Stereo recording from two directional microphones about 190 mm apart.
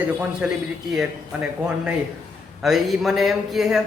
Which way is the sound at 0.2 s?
5° right (ahead or behind).